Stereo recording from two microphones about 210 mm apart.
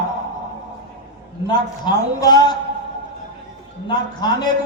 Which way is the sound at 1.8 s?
20° left (ahead or behind).